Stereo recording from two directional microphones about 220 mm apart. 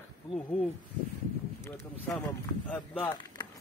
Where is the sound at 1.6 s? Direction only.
15° left (ahead or behind).